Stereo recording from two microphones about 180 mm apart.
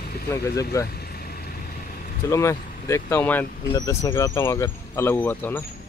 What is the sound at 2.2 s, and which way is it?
Speech, 15° left (ahead or behind).